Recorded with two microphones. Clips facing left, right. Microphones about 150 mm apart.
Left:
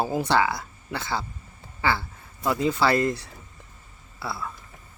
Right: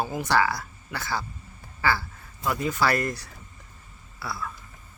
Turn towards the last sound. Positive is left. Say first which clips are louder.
# left 1 dB
turn(degrees=25)  # may be behind; listen again after turning